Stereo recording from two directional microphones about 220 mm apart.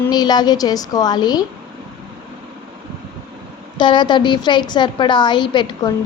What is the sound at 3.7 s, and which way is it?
A woman's voice, 20° left (ahead or behind).